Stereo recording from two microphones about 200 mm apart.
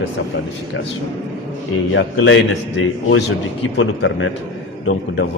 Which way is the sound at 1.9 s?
70° left (ahead or behind).